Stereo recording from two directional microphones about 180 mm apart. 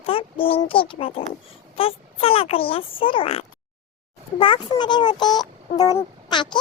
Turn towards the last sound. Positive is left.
turn(degrees=25)  # may be behind; listen again after turning